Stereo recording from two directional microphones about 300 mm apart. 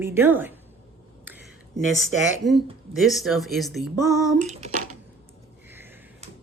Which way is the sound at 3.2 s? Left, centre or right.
Centre.